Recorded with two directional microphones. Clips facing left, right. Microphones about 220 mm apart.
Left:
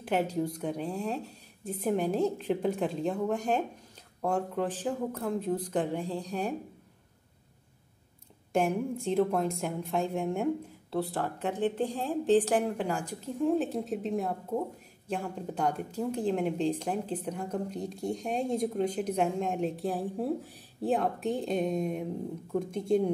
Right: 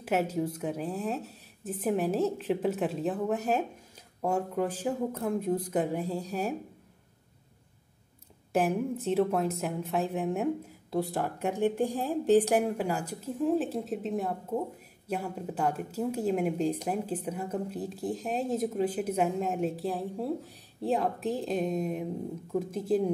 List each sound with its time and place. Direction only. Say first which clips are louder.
0.0 s a woman's voice: even; 5° right (ahead or behind)
8.5 s a woman's voice: right 1 dB; 5° right (ahead or behind)